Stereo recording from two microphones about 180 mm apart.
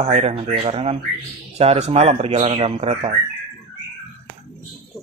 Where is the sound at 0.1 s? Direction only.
35° right (ahead or behind).